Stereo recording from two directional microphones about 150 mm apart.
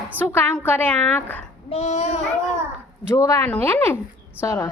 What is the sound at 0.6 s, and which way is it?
Speech, 10° left (ahead or behind).